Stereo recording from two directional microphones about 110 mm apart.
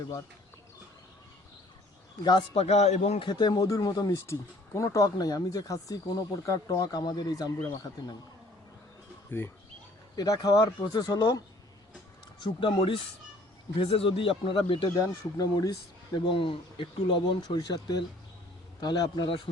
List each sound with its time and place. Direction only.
2.2 s speech: 45° left (ahead or behind)
2.6 s a man's voice: 75° left (ahead or behind)
3.2 s speech: 40° left (ahead or behind)
10.2 s speech: 35° left (ahead or behind)
12.4 s speech: 50° left (ahead or behind)
14.9 s speech: 35° left (ahead or behind)